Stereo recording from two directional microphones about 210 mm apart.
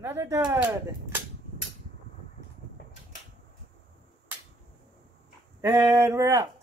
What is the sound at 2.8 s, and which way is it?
Mechanical fan, 45° left (ahead or behind).